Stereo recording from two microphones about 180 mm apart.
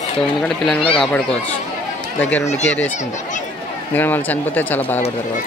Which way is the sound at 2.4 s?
40° left (ahead or behind).